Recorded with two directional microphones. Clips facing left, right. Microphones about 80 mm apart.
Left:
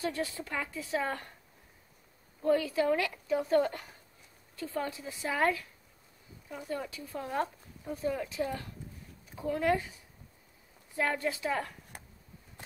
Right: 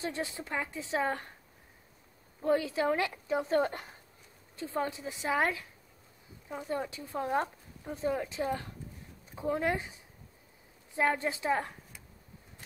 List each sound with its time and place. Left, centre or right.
0.0 s speech: right
2.4 s speech: right
11.0 s speech: right
11.9 s a sound: left